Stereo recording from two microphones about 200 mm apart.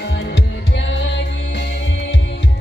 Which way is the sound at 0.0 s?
60° left (ahead or behind).